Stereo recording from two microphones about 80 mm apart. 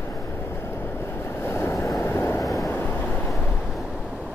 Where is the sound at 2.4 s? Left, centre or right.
Centre.